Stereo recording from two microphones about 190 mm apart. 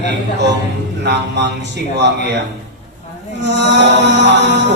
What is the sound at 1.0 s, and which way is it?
Mantra, 65° right (ahead or behind).